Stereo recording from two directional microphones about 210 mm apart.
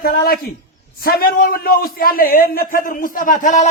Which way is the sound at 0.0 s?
45° left (ahead or behind).